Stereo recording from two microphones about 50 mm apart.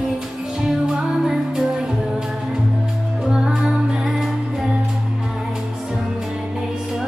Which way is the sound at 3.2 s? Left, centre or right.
Centre.